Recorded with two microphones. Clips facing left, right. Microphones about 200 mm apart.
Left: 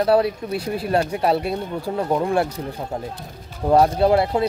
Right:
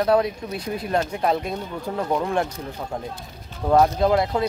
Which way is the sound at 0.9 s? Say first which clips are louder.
Left 3 dB; 10° left (ahead or behind).